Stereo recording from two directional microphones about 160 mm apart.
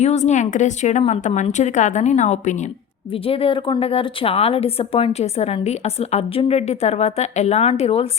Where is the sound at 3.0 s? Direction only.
35° left (ahead or behind).